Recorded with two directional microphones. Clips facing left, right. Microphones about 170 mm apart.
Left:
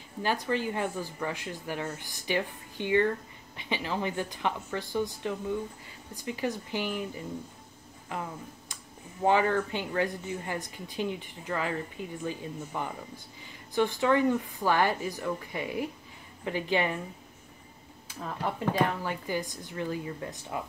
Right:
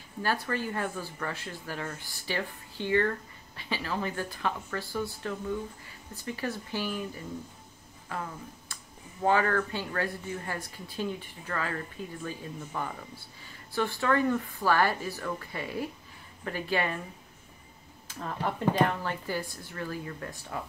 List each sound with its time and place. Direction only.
0.2 s speech: 15° left (ahead or behind)
8.1 s speech: 15° left (ahead or behind)
18.0 s speech: 5° left (ahead or behind)
18.9 s speech: 15° left (ahead or behind)